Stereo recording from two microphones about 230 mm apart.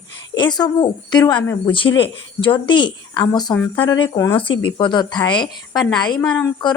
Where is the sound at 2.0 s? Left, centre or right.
Left.